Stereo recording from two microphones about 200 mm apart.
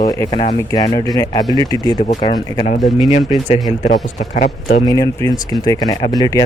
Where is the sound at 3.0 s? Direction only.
25° left (ahead or behind).